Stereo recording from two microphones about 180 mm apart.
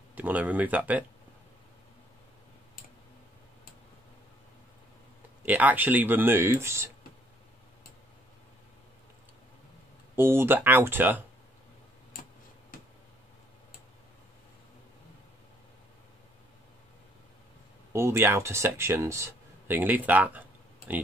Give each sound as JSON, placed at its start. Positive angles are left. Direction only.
{"t": 0.1, "sound": "speech", "side_deg": -10}
{"t": 5.4, "sound": "speech", "side_deg": -10}
{"t": 10.1, "sound": "speech", "side_deg": -15}
{"t": 17.9, "sound": "speech", "side_deg": -15}